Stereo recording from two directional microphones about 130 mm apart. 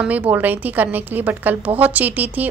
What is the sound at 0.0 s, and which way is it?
A woman's voice, 10° right (ahead or behind).